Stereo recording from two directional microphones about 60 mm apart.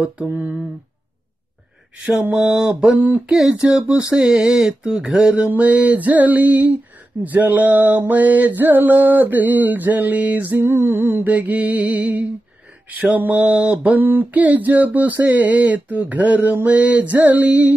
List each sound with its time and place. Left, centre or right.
0.3 s music: right
2.0 s speech: centre
4.1 s mantra: centre
10.6 s music: right
11.2 s mantra: right
13.3 s mantra: centre
13.9 s mantra: right